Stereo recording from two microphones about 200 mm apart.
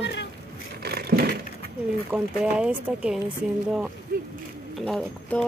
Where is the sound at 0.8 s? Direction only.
50° right (ahead or behind).